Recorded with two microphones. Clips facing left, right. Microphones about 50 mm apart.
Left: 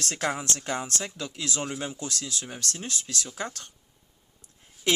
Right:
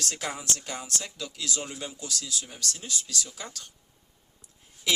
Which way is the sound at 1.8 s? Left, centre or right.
Left.